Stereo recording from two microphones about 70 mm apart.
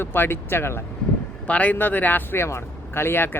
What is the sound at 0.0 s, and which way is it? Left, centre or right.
Speech, left.